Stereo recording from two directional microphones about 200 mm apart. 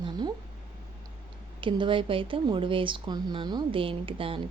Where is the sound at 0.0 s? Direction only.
20° right (ahead or behind).